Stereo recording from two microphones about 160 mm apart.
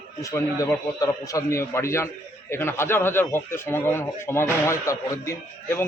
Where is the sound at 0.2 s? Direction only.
20° left (ahead or behind).